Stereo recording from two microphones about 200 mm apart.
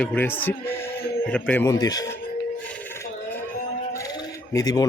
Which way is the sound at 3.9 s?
15° left (ahead or behind).